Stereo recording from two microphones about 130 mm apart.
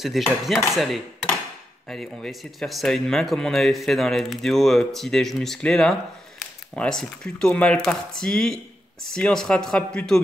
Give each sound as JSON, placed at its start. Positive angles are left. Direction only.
{"t": 0.0, "sound": "speech", "side_deg": 0}
{"t": 1.9, "sound": "speech", "side_deg": 0}